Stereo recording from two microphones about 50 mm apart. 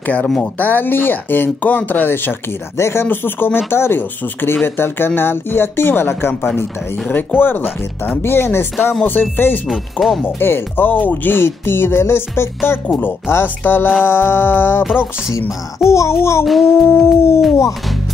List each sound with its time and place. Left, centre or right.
0.0 s speech: left
2.8 s howl: left
3.1 s speech: left
6.6 s speech: left
9.0 s speech: left
9.7 s speech: centre
10.2 s speech: left
12.7 s howl: left
13.0 s speech: left
15.9 s howl: left
16.4 s speech: centre
16.8 s howl: left